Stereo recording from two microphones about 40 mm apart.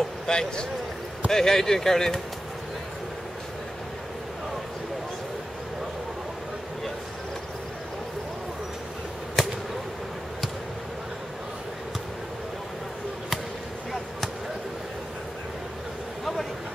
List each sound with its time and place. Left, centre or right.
0.3 s speech: centre